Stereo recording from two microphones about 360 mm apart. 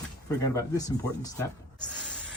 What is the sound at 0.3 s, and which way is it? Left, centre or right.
Speech, centre.